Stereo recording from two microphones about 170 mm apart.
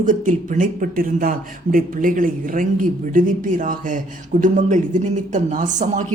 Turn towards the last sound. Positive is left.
turn(degrees=-45)  # may be behind; listen again after turning